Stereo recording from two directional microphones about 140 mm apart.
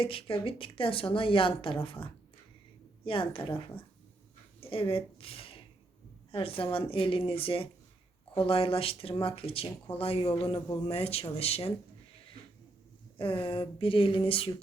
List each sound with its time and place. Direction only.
0.0 s a woman's voice: 40° left (ahead or behind)
13.1 s a woman's voice: 40° left (ahead or behind)